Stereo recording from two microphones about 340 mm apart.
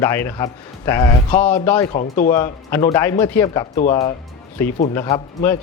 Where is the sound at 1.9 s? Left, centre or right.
Left.